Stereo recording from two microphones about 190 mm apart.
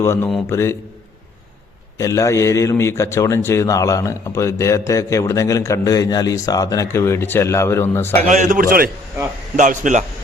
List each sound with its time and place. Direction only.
0.0 s a man's voice: 15° left (ahead or behind)
2.0 s a man's voice: 15° left (ahead or behind)
8.2 s a man's voice: 40° right (ahead or behind)